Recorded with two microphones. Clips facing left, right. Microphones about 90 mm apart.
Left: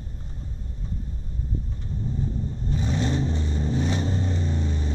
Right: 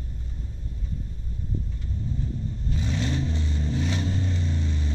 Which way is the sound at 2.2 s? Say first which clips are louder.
Left 3 dB; 25° left (ahead or behind).